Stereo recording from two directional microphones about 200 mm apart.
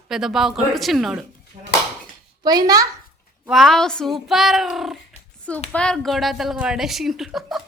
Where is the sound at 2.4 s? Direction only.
20° right (ahead or behind).